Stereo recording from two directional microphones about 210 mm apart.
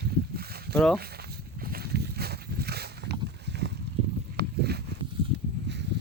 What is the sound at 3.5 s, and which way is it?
Boat, 55° right (ahead or behind).